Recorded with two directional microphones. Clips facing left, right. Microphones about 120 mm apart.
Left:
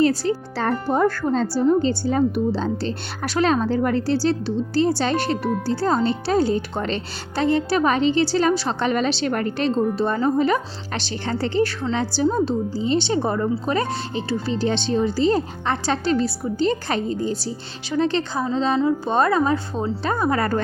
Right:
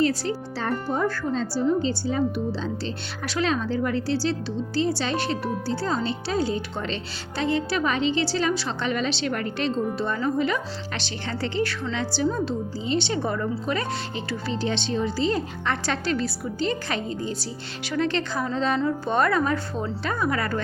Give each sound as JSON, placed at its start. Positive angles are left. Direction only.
{"t": 0.0, "sound": "a woman's voice", "side_deg": 35}
{"t": 0.5, "sound": "a woman's voice", "side_deg": 60}
{"t": 20.1, "sound": "a woman's voice", "side_deg": 35}